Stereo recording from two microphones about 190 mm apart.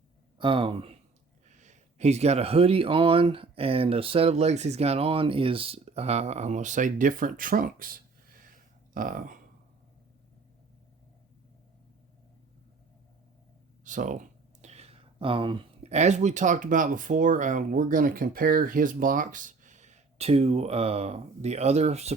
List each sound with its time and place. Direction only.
0.3 s speech: 25° right (ahead or behind)
1.5 s speech: 40° right (ahead or behind)
13.8 s speech: 40° right (ahead or behind)